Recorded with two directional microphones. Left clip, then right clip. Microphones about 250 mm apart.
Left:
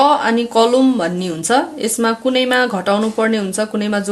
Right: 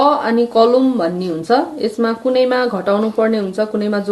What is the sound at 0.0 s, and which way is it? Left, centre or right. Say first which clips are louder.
A woman's voice: even; left.